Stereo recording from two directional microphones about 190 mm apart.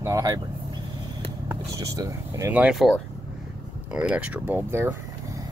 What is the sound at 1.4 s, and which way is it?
Speech, 15° right (ahead or behind).